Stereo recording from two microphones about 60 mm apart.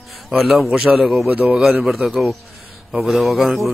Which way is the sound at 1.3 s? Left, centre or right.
Right.